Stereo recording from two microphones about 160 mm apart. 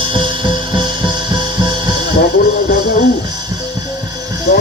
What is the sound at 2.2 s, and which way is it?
Music, 70° left (ahead or behind).